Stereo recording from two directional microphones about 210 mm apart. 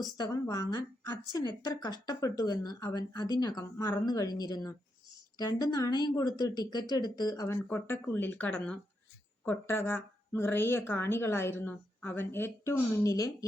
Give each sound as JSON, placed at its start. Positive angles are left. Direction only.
{"t": 0.2, "sound": "a woman's voice", "side_deg": 15}